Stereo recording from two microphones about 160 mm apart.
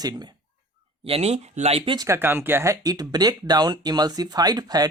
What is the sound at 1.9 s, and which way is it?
Speech, 20° right (ahead or behind).